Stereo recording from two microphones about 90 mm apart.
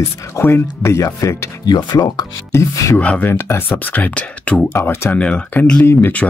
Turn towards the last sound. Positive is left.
turn(degrees=20)  # may be behind; listen again after turning